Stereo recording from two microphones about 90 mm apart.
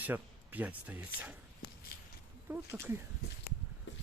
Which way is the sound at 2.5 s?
25° right (ahead or behind).